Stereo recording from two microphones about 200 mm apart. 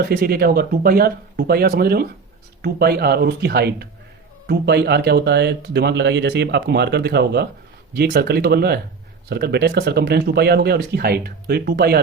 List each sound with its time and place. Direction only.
0.0 s speech: 50° right (ahead or behind)